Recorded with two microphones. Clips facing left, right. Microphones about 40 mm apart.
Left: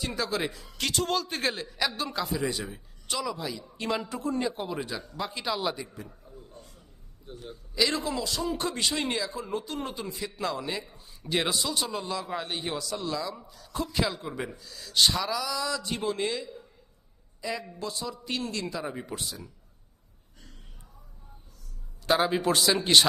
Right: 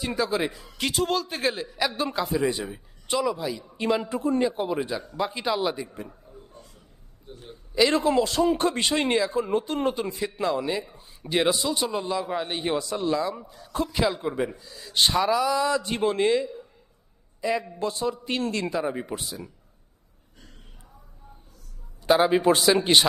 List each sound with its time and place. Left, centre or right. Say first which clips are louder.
0.2 s a man's voice: right 5 dB; centre
2.4 s a man's voice: right 5 dB; right
3.3 s a man's voice: right 5 dB; centre
6.3 s a sound: right 1 dB; centre
7.4 s speech: right 6 dB; right
7.9 s speech: right 9 dB; right
10.4 s a man's voice: right 6 dB; centre
11.6 s a man's voice: right 4 dB; centre; by 13.9 s right
13.9 s a man's voice: right 5 dB; centre; by 18.7 s right
18.8 s speech: right 6 dB; right
22.3 s a man's voice: right 5 dB; centre